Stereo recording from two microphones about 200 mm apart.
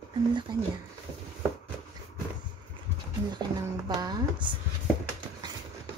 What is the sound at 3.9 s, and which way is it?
Speech, 20° right (ahead or behind).